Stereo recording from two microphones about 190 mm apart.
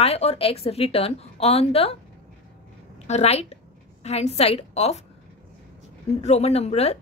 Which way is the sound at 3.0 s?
35° left (ahead or behind).